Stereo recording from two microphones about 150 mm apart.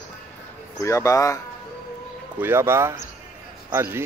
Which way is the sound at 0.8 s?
20° left (ahead or behind).